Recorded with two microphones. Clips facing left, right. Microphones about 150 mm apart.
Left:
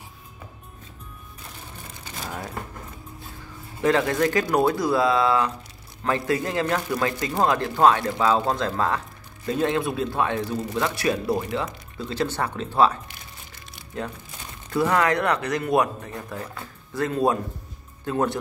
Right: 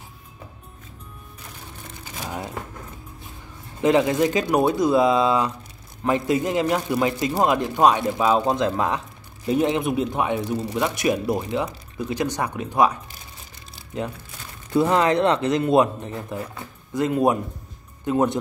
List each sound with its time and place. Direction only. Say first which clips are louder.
2.1 s a sound: right 2 dB; 10° right (ahead or behind)
3.8 s speech: right 3 dB; 20° right (ahead or behind)
14.7 s speech: right 3 dB; 25° right (ahead or behind)